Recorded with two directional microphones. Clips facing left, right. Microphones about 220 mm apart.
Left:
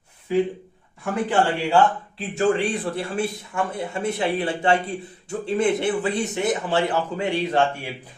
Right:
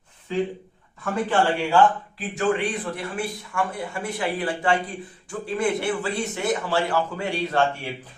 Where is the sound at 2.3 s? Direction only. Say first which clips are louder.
Left 3 dB; 25° left (ahead or behind).